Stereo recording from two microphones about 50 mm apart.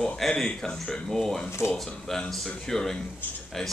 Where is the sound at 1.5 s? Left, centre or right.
Left.